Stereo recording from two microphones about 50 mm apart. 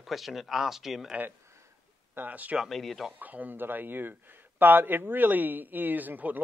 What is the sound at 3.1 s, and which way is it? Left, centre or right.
Speech, right.